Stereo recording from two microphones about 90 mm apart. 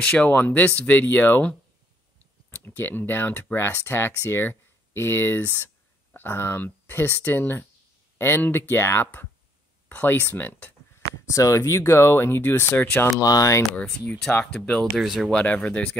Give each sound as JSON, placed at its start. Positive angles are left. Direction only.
{"t": 0.0, "sound": "speech", "side_deg": 10}
{"t": 2.5, "sound": "speech", "side_deg": 20}
{"t": 11.1, "sound": "speech", "side_deg": 35}
{"t": 13.2, "sound": "speech", "side_deg": 40}
{"t": 13.7, "sound": "speech", "side_deg": 10}
{"t": 15.3, "sound": "speech", "side_deg": 15}